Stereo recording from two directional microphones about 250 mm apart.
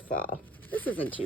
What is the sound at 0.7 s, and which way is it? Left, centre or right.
Speech, centre.